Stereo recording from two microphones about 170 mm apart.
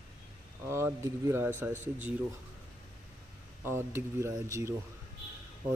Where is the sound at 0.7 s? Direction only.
15° right (ahead or behind).